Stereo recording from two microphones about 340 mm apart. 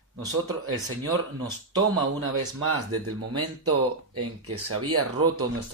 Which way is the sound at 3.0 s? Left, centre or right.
Right.